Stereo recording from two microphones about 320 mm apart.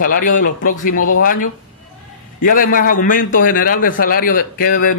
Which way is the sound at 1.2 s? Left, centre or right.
Left.